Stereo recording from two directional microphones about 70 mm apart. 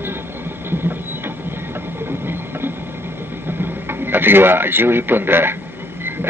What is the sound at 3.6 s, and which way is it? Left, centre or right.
A man's voice, right.